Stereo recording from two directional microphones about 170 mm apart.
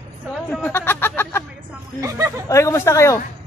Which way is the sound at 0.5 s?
10° left (ahead or behind).